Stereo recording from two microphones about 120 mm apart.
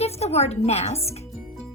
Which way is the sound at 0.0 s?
60° left (ahead or behind).